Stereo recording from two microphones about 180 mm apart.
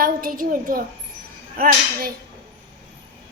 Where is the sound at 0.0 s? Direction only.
50° right (ahead or behind).